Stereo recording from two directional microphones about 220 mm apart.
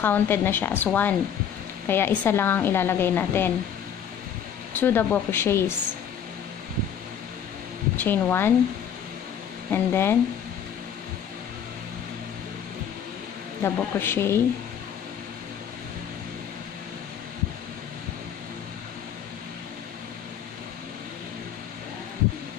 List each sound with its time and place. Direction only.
0.0 s speech: 10° left (ahead or behind)
4.7 s speech: 10° left (ahead or behind)
8.0 s speech: 10° left (ahead or behind)
9.7 s speech: 10° left (ahead or behind)
13.6 s speech: 10° left (ahead or behind)